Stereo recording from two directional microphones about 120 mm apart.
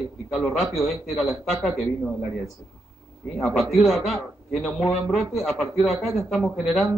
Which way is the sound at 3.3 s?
Centre (ahead or behind).